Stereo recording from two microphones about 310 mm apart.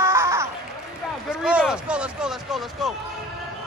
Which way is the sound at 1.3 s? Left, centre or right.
Centre.